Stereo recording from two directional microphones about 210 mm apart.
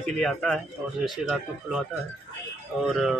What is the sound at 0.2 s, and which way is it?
A man's voice, centre (ahead or behind).